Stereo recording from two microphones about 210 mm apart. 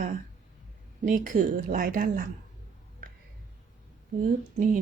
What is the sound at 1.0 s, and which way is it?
A woman's voice, 40° right (ahead or behind).